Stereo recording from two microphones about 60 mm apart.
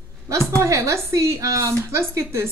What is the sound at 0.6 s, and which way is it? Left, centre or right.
Speech, right.